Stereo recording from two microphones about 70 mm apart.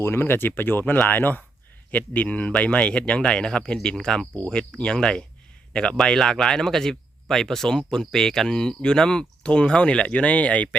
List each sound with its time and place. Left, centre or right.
0.0 s speech: left; by 10.8 s centre